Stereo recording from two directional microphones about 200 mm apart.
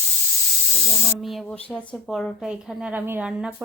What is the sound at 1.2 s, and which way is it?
Speech, 5° left (ahead or behind).